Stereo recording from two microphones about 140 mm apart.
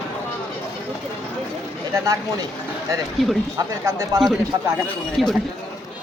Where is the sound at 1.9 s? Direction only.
25° right (ahead or behind).